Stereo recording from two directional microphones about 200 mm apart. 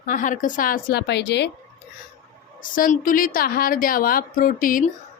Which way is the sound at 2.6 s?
45° left (ahead or behind).